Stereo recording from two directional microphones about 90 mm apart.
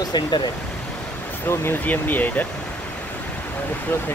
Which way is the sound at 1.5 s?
25° left (ahead or behind).